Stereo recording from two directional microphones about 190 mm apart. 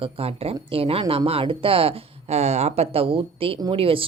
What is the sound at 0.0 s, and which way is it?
Speech, 30° right (ahead or behind).